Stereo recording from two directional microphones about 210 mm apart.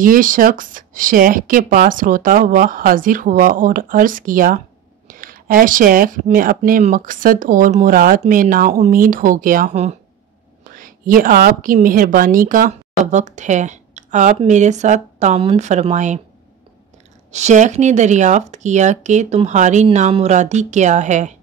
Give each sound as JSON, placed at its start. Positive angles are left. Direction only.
{"t": 0.0, "sound": "speech", "side_deg": -40}
{"t": 17.3, "sound": "speech", "side_deg": -35}